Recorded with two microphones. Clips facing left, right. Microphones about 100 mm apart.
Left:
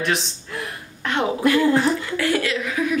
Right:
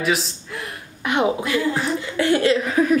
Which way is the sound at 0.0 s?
Centre (ahead or behind).